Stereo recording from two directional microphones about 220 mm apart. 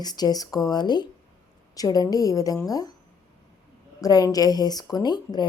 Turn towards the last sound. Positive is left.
turn(degrees=20)  # may be behind; listen again after turning